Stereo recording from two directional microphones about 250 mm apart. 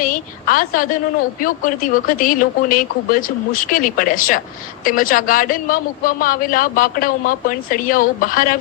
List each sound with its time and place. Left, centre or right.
0.0 s a woman's voice: left